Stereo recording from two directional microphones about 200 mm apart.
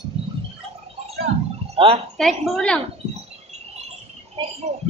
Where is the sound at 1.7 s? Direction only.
30° right (ahead or behind).